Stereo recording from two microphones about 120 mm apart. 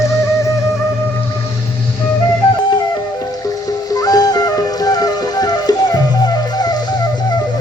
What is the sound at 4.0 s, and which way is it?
Music, 30° left (ahead or behind).